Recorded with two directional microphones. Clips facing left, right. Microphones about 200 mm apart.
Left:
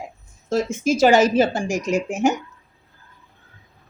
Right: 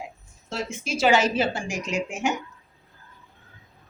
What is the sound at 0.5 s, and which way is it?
A woman's voice, 45° left (ahead or behind).